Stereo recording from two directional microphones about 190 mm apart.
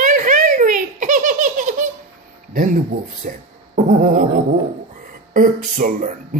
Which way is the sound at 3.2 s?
45° right (ahead or behind).